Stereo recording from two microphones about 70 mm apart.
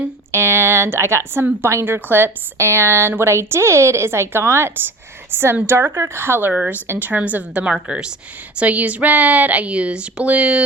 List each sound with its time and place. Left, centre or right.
0.3 s a woman's voice: right
6.5 s a woman's voice: right
6.8 s a woman's voice: right
7.1 s a woman's voice: right